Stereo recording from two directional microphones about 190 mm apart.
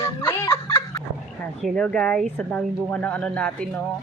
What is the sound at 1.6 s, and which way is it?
A woman's voice, 5° left (ahead or behind).